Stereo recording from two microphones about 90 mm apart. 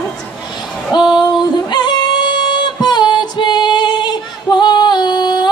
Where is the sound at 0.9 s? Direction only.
55° left (ahead or behind).